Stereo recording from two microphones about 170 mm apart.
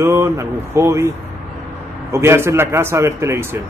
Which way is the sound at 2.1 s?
15° right (ahead or behind).